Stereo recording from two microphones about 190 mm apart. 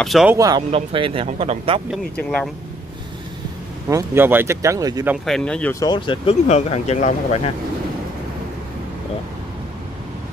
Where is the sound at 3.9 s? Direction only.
10° right (ahead or behind).